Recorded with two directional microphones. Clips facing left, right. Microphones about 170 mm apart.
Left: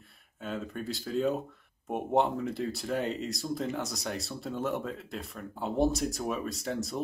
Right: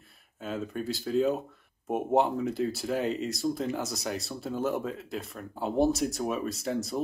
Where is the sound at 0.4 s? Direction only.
Centre (ahead or behind).